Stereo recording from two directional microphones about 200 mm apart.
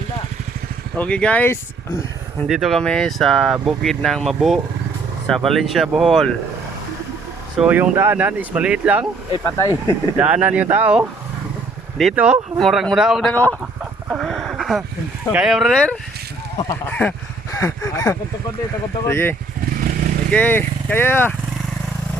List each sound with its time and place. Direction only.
0.9 s speech: 5° left (ahead or behind)
7.6 s speech: 5° right (ahead or behind)
9.4 s speech: 15° left (ahead or behind)
9.8 s speech: 10° right (ahead or behind); by 13.6 s 5° left (ahead or behind)
14.1 s a sound: centre (ahead or behind)
15.3 s speech: 5° right (ahead or behind)